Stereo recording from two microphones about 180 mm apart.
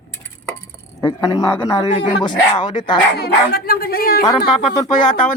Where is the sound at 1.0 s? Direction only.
20° left (ahead or behind).